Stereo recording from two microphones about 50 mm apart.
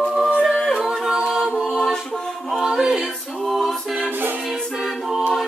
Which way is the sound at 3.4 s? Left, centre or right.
Centre.